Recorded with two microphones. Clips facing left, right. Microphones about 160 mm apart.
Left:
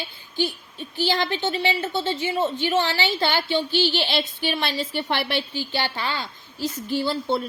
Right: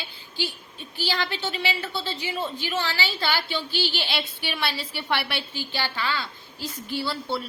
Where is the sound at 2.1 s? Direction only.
45° left (ahead or behind).